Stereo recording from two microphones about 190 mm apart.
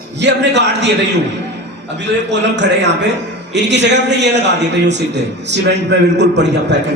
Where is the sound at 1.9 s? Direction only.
65° right (ahead or behind).